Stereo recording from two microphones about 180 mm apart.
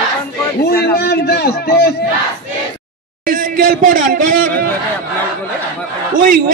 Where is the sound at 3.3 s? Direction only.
50° right (ahead or behind).